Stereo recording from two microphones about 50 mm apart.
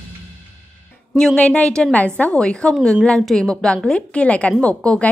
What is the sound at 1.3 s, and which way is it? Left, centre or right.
A woman's voice, left.